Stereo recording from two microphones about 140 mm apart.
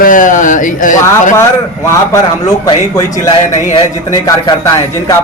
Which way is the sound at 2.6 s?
25° left (ahead or behind).